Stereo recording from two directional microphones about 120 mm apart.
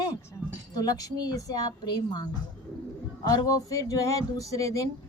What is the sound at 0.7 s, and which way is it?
A woman's voice, 30° left (ahead or behind).